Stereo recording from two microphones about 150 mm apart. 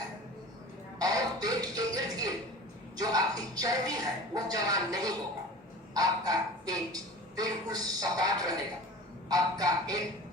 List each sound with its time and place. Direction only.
0.9 s music: 25° right (ahead or behind)
2.9 s speech: 25° right (ahead or behind)
9.3 s music: 25° right (ahead or behind)